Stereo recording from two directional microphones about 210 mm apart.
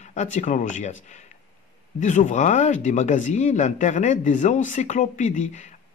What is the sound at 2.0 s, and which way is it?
A man's voice, 35° left (ahead or behind).